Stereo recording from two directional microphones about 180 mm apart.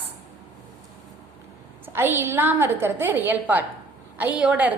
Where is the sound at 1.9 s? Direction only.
10° right (ahead or behind).